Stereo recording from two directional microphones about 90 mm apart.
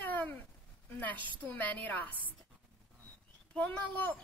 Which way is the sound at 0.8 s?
20° left (ahead or behind).